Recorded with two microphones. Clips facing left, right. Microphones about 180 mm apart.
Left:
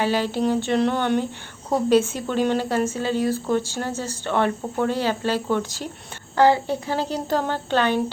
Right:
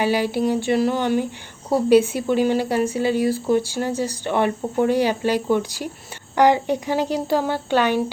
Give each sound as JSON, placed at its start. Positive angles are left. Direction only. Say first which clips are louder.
{"t": 0.0, "sound": "speech", "louder": "right 2 dB", "side_deg": -10}